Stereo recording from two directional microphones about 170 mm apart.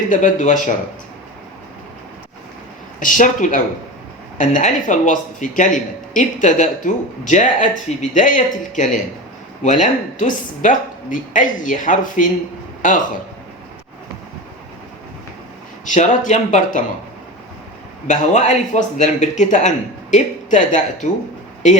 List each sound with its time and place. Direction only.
0.1 s a man's voice: 45° left (ahead or behind)
3.0 s a man's voice: 50° left (ahead or behind)
15.9 s a man's voice: 45° left (ahead or behind)
18.1 s a man's voice: 45° left (ahead or behind)